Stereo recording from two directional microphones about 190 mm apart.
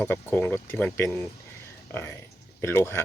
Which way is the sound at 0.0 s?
10° left (ahead or behind).